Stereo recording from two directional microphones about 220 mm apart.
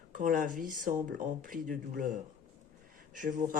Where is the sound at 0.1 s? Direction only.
40° right (ahead or behind).